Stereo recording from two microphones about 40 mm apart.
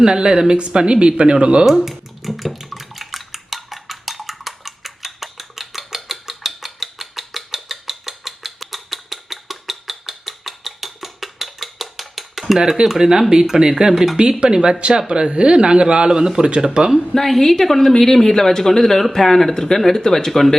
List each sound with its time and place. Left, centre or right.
0.0 s speech: centre
1.6 s dishes: centre
12.5 s speech: centre
17.2 s a woman's voice: centre